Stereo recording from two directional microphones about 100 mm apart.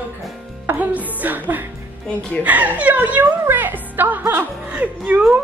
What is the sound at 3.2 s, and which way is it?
Music, 20° right (ahead or behind).